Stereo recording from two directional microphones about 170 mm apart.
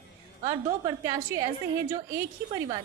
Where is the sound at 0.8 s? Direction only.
20° right (ahead or behind).